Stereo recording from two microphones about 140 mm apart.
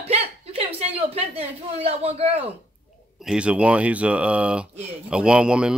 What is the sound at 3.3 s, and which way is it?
Speech, 10° right (ahead or behind).